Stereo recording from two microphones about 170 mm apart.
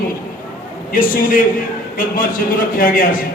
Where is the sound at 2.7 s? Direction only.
55° left (ahead or behind).